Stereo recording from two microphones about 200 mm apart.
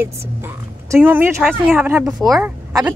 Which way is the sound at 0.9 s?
10° right (ahead or behind).